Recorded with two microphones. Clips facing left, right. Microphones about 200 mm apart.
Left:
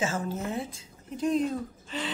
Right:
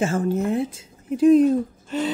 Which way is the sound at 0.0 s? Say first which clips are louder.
Right 9 dB; 60° right (ahead or behind).